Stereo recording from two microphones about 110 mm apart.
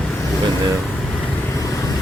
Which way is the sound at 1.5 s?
30° left (ahead or behind).